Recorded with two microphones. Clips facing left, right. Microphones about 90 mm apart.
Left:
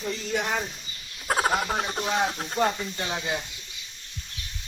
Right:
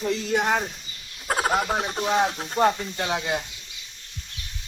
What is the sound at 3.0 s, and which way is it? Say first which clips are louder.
Speech: right 4 dB; 55° right (ahead or behind).